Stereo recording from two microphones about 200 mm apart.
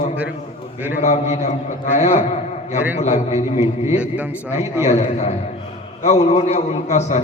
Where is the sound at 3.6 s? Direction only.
10° right (ahead or behind).